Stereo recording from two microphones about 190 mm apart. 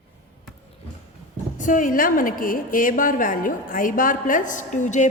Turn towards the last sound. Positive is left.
turn(degrees=40)  # may be behind; listen again after turning